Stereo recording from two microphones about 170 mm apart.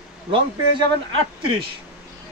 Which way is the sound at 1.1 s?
30° right (ahead or behind).